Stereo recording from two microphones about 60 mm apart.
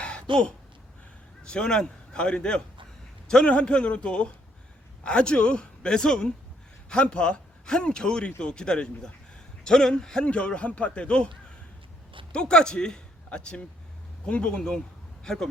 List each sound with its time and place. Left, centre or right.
0.0 s a sound: centre
1.5 s a man's voice: centre
12.3 s a man's voice: centre